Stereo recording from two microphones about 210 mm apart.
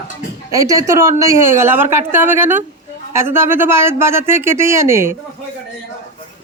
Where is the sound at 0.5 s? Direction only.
15° right (ahead or behind).